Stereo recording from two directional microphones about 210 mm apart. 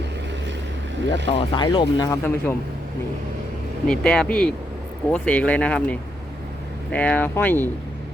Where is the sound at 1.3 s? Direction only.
25° left (ahead or behind).